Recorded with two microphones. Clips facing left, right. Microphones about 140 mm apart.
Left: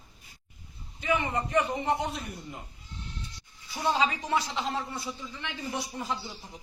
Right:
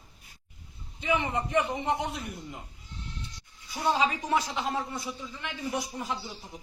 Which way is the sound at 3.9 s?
15° right (ahead or behind).